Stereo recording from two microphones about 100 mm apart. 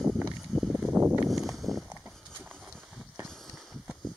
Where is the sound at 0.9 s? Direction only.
20° right (ahead or behind).